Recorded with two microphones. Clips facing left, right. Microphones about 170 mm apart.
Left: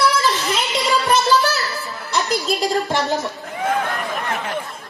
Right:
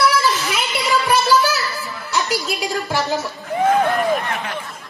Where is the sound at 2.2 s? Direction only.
10° right (ahead or behind).